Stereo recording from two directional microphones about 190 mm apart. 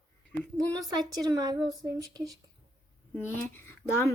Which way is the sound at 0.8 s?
20° right (ahead or behind).